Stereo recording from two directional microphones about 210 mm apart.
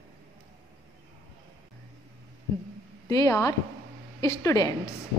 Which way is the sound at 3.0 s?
15° left (ahead or behind).